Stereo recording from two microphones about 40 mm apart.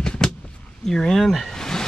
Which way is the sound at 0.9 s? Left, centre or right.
Centre.